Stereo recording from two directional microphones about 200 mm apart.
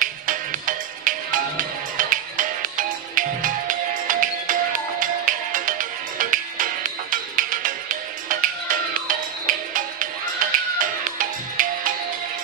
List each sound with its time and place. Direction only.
0.0 s music: 40° right (ahead or behind)